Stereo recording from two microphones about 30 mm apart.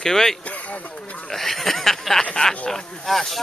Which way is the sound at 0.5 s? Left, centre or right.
Left.